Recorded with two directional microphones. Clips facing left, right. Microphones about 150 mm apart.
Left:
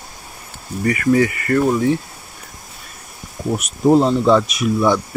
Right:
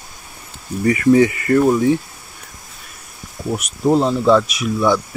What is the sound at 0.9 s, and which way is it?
Speech, 20° right (ahead or behind).